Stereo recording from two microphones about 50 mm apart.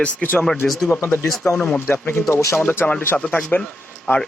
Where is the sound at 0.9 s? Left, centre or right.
Left.